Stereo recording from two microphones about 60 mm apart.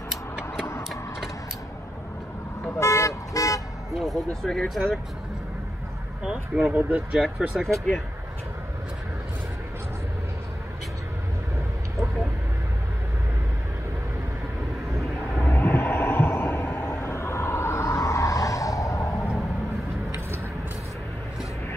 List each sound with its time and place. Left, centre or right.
0.4 s tick-tock: left
2.8 s toot: left
3.9 s speech: centre
4.3 s speech: centre
4.6 s speech: centre
6.3 s speech: centre
7.3 s speech: centre
15.3 s vehicle: left
16.9 s vehicle: left